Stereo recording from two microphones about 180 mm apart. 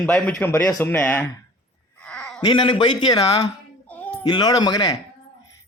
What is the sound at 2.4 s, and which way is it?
Speech, 30° left (ahead or behind).